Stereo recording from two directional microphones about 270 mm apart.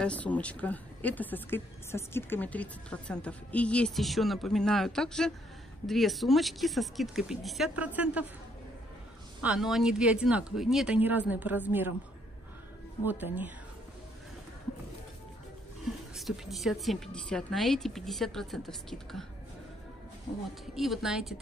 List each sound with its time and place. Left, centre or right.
0.0 s speech: centre
9.4 s speech: centre
13.0 s speech: centre
16.2 s speech: centre
20.7 s speech: centre